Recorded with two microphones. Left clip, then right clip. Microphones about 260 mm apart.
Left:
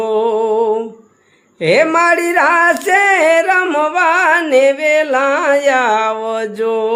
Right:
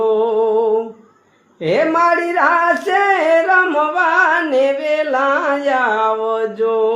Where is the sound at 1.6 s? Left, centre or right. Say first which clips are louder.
Left 3 dB; left.